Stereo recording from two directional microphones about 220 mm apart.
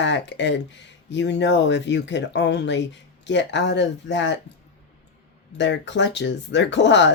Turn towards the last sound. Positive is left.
turn(degrees=55)  # may be behind; listen again after turning